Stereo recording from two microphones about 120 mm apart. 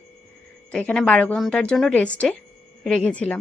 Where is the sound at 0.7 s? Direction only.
10° left (ahead or behind).